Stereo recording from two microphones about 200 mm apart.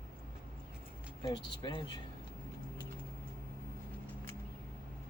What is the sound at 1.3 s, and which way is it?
Speech, 20° left (ahead or behind).